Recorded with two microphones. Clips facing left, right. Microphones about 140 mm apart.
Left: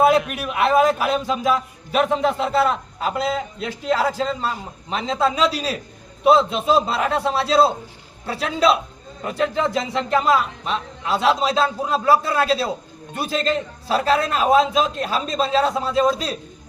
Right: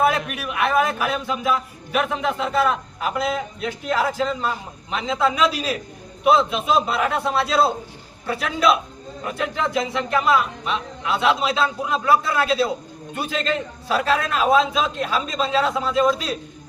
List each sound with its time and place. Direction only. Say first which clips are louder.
0.0 s a man's voice: left 4 dB; 35° left (ahead or behind)